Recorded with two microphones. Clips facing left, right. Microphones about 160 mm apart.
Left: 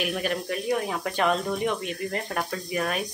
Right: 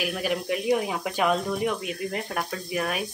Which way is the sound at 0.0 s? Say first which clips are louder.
Even; 5° right (ahead or behind).